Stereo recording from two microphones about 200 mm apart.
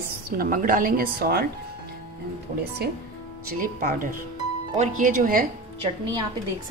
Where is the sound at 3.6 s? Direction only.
45° right (ahead or behind).